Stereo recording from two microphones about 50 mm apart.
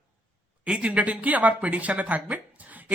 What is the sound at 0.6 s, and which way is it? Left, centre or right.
A man's voice, right.